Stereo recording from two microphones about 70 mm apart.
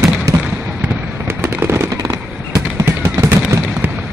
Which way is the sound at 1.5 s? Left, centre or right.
Right.